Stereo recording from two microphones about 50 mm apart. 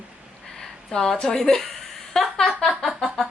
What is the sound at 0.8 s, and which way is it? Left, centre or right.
A woman's voice, centre.